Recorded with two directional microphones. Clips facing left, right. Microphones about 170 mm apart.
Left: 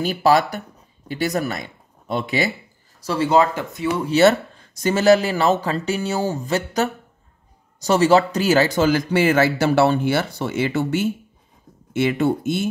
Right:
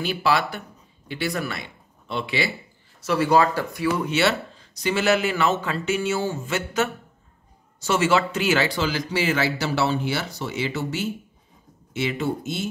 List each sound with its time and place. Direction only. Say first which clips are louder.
0.0 s speech: left 6 dB; 40° left (ahead or behind)
3.0 s speech: left 2 dB; 30° left (ahead or behind)
4.1 s speech: left 7 dB; 45° left (ahead or behind)